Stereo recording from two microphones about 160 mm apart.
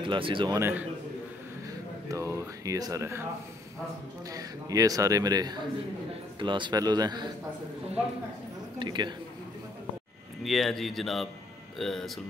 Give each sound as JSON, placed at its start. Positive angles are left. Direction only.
{"t": 0.0, "sound": "speech", "side_deg": -30}
{"t": 0.6, "sound": "a man's voice", "side_deg": -15}
{"t": 2.0, "sound": "speech", "side_deg": -20}
{"t": 4.3, "sound": "speech", "side_deg": -20}
{"t": 8.7, "sound": "speech", "side_deg": -25}
{"t": 10.4, "sound": "speech", "side_deg": 0}